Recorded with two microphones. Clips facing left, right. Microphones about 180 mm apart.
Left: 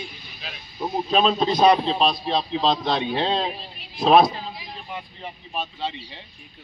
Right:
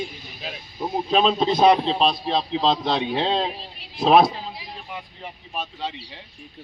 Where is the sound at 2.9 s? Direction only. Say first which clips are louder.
Right 1 dB; 15° right (ahead or behind).